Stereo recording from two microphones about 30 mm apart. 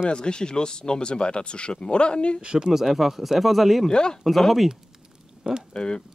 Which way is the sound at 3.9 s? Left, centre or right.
Left.